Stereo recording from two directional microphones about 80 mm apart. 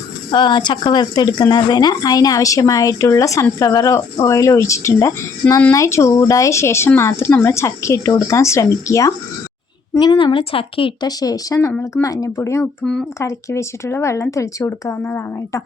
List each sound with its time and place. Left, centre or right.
0.3 s a woman's voice: left
9.9 s a woman's voice: left
10.8 s speech: left
11.2 s speech: left
12.4 s speech: left
12.8 s speech: centre
13.1 s speech: left